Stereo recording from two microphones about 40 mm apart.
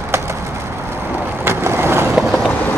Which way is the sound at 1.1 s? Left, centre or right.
Right.